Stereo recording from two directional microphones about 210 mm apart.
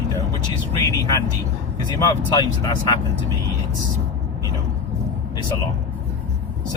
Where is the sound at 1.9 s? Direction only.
20° left (ahead or behind).